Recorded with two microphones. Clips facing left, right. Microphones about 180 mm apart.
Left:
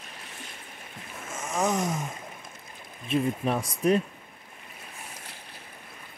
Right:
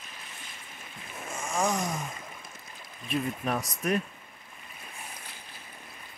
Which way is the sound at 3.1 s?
30° left (ahead or behind).